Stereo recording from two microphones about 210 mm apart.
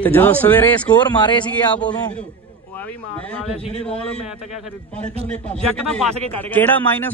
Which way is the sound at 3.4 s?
30° left (ahead or behind).